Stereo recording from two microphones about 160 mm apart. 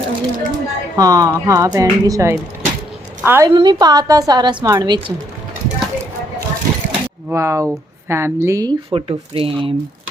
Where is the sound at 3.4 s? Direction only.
25° right (ahead or behind).